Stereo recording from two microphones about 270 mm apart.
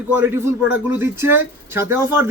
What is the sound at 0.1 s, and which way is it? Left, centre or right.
Speech, centre.